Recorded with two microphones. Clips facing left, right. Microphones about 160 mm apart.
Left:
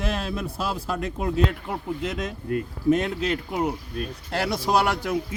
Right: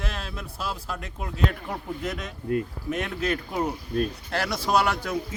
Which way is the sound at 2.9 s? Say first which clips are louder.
Left 6 dB; 25° left (ahead or behind).